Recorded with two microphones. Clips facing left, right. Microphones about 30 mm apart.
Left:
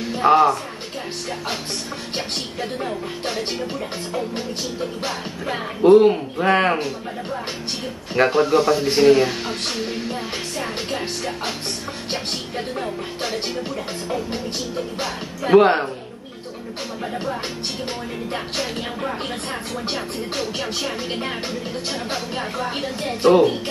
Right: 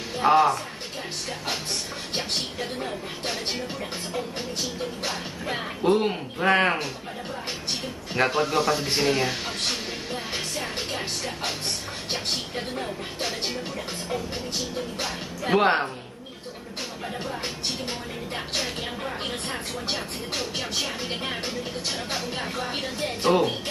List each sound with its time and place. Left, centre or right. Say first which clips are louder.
0.2 s speech: left 4 dB; centre
5.0 s speech: left 4 dB; centre
5.9 s speech: left 11 dB; centre
8.1 s speech: left 7 dB; centre
9.5 s music: left 4 dB; left
10.3 s music: left 3 dB; left
12.5 s speech: left 4 dB; centre
15.5 s speech: left 7 dB; centre
17.0 s speech: left 6 dB; centre
18.3 s music: left 3 dB; left
19.9 s speech: left 3 dB; left
20.8 s speech: left 4 dB; centre
22.7 s speech: left 4 dB; left